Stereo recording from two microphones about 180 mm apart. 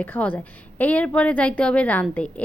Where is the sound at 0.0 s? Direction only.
10° left (ahead or behind).